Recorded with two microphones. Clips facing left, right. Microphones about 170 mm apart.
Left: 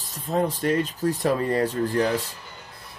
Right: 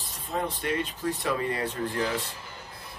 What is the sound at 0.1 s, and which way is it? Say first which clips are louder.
Speech: left 7 dB; 40° left (ahead or behind).